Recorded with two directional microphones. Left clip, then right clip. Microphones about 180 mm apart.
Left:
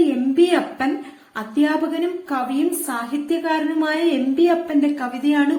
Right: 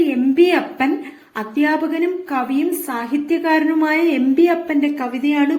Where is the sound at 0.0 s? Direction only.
15° right (ahead or behind).